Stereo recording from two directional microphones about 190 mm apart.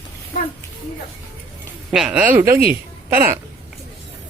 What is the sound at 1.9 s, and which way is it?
Speech, 5° right (ahead or behind).